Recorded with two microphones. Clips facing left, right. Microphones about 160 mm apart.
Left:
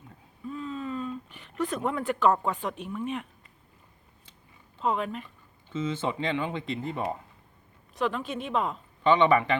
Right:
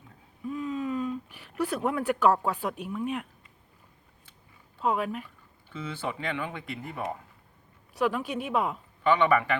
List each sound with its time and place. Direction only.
0.4 s a sound: 10° right (ahead or behind)
4.8 s speech: 5° right (ahead or behind)
5.6 s speech: 20° left (ahead or behind)
7.9 s speech: 10° right (ahead or behind)
9.0 s speech: 25° left (ahead or behind)